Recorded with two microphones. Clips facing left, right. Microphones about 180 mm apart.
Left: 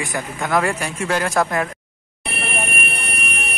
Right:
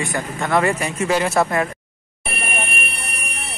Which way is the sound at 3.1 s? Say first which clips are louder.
Left 4 dB; 60° left (ahead or behind).